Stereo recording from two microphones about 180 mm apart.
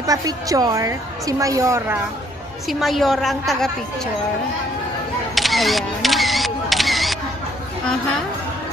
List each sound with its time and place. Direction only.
0.0 s a woman's voice: 20° right (ahead or behind)
2.7 s a woman's voice: centre (ahead or behind)
5.3 s camera: centre (ahead or behind)